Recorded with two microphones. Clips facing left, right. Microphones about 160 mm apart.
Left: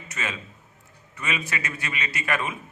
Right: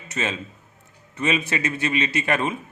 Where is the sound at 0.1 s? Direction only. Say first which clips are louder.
Right 6 dB; 25° right (ahead or behind).